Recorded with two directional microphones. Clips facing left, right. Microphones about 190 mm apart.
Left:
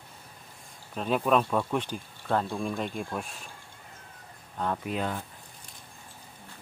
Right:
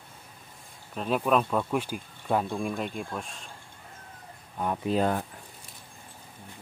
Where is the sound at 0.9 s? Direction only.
Centre (ahead or behind).